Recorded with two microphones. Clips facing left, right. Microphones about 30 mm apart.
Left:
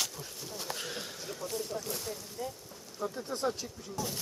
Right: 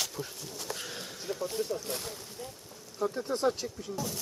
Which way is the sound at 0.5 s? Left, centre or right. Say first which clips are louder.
Left 1 dB; centre.